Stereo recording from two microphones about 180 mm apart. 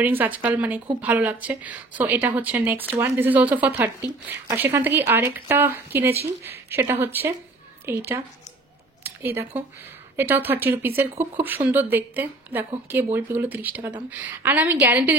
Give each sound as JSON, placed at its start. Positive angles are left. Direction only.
{"t": 0.0, "sound": "a woman's voice", "side_deg": -10}